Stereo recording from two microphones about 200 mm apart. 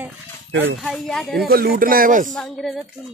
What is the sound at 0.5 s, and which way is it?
Speech, 65° right (ahead or behind).